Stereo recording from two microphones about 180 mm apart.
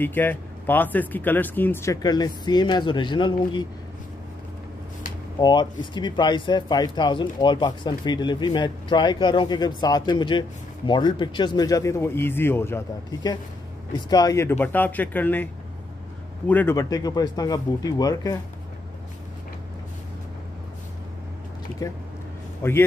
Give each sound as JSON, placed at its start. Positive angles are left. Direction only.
{"t": 0.0, "sound": "speech", "side_deg": 10}
{"t": 5.4, "sound": "speech", "side_deg": 25}
{"t": 21.8, "sound": "a man's voice", "side_deg": 20}